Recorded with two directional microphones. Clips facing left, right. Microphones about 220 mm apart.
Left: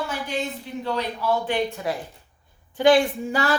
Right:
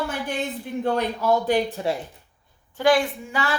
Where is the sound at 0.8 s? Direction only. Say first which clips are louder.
Right 3 dB; 45° right (ahead or behind); by 1.9 s 30° right (ahead or behind).